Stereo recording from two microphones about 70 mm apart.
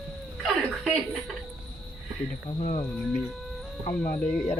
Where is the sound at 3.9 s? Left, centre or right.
Left.